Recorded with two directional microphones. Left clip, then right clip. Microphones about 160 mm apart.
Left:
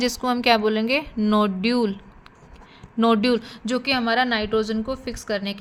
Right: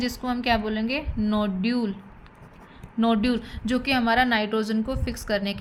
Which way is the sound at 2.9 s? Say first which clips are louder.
Left 5 dB; 45° left (ahead or behind).